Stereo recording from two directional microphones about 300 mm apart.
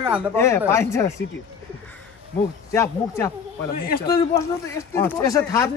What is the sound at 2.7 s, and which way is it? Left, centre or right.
Speech, centre.